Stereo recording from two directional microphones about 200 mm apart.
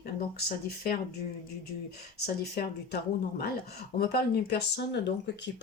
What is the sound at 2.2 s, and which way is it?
Speech, 50° left (ahead or behind).